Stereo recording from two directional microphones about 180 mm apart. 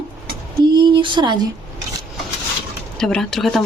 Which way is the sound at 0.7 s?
25° right (ahead or behind).